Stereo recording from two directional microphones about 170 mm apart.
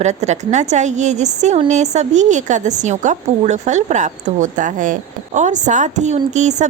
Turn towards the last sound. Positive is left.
turn(degrees=-45)  # may be behind; listen again after turning